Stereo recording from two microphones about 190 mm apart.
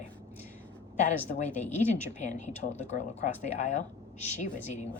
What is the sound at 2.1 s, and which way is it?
Speech, 40° left (ahead or behind).